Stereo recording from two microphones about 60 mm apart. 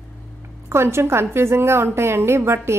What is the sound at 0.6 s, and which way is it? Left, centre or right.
A woman's voice, right.